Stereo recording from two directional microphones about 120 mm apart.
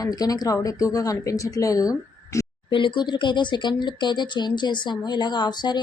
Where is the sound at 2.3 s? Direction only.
25° left (ahead or behind).